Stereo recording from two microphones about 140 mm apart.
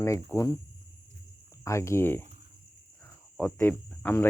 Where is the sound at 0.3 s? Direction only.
25° left (ahead or behind).